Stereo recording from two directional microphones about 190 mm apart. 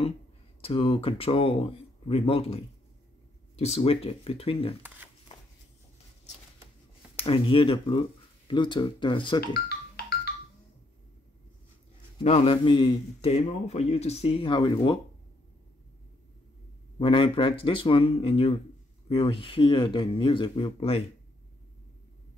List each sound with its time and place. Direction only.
0.6 s a man's voice: 30° left (ahead or behind)
7.2 s speech: 30° left (ahead or behind)
9.5 s music: 55° left (ahead or behind)
12.2 s a man's voice: 30° left (ahead or behind)
17.0 s speech: 25° left (ahead or behind)